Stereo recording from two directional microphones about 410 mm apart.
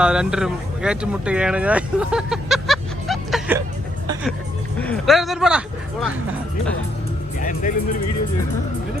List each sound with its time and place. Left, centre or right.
0.0 s speech: centre
4.0 s music: centre
4.8 s speech: centre
7.3 s speech: centre